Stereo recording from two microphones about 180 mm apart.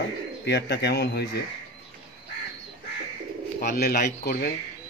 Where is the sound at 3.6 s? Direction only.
60° left (ahead or behind).